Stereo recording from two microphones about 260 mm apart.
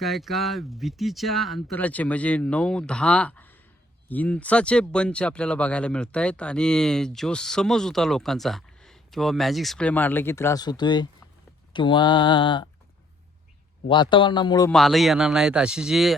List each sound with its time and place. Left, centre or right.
0.0 s speech: centre
11.7 s mantra: centre
13.8 s mantra: centre
14.7 s speech: centre